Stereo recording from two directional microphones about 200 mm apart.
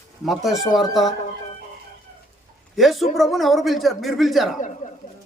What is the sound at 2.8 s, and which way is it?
A man's voice, centre (ahead or behind).